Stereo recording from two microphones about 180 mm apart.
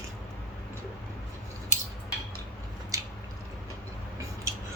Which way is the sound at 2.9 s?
20° right (ahead or behind).